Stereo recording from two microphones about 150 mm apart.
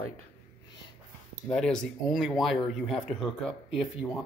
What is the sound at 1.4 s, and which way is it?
Speech, 5° left (ahead or behind).